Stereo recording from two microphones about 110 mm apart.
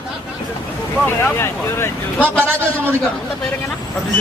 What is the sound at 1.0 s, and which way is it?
Speech, 20° left (ahead or behind).